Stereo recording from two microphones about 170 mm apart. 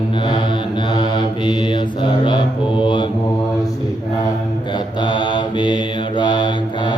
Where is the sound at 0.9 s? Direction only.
25° left (ahead or behind).